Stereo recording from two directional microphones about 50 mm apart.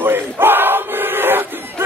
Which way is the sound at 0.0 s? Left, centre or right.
Right.